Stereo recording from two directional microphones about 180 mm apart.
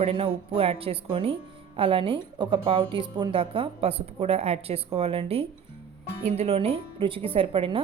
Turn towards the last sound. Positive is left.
turn(degrees=-30)  # may be behind; listen again after turning